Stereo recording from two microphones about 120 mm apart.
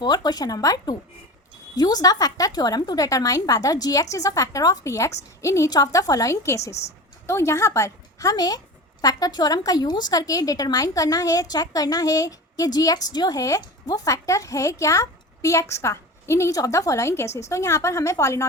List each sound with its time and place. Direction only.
0.0 s a woman's voice: 35° left (ahead or behind)